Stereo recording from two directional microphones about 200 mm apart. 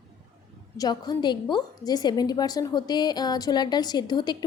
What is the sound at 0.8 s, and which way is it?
A woman's voice, 20° left (ahead or behind).